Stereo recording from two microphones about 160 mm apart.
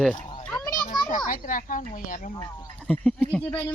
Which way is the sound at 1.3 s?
55° left (ahead or behind).